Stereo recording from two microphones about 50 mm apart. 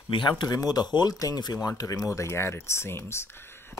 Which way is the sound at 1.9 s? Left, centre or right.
Left.